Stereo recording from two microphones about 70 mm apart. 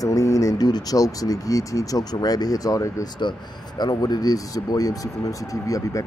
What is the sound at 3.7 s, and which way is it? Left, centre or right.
Speech, left.